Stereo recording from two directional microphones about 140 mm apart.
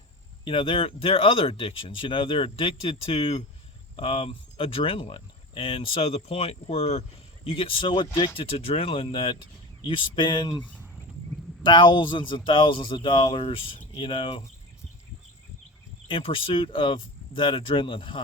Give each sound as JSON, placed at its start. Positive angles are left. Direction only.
{"t": 0.4, "sound": "speech", "side_deg": 40}
{"t": 10.6, "sound": "cricket", "side_deg": 10}
{"t": 11.6, "sound": "speech", "side_deg": 35}
{"t": 16.0, "sound": "speech", "side_deg": 40}